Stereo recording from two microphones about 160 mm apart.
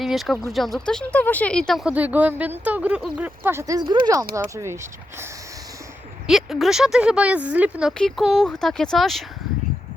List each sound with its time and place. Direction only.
0.0 s a sound: centre (ahead or behind)
0.5 s speech: centre (ahead or behind); by 5.3 s 15° right (ahead or behind)
6.2 s speech: centre (ahead or behind)